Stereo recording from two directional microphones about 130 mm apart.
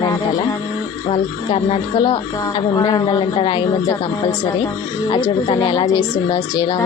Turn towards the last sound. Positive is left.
turn(degrees=35)  # may be behind; listen again after turning